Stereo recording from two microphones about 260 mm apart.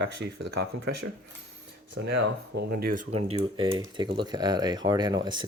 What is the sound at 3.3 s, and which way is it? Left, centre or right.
Speech, right.